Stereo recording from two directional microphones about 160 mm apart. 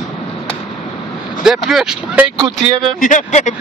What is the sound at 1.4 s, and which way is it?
Speech, centre (ahead or behind).